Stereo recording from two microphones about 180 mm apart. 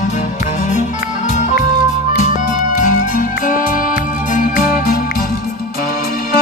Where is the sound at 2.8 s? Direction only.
45° left (ahead or behind).